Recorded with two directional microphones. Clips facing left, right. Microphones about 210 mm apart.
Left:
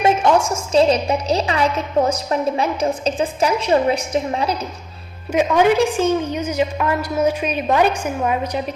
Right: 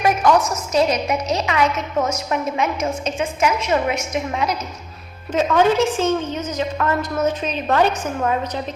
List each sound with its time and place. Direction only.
0.0 s a woman's voice: 25° left (ahead or behind)
5.3 s a woman's voice: 10° left (ahead or behind)